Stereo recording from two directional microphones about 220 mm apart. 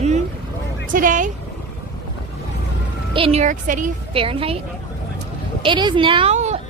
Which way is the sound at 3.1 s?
25° right (ahead or behind).